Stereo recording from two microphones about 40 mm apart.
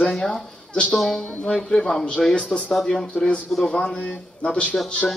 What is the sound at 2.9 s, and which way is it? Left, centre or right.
A man's voice, left.